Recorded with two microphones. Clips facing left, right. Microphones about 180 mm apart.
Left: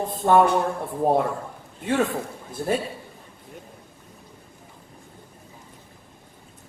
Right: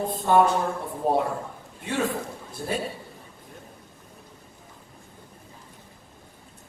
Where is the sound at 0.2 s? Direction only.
50° left (ahead or behind).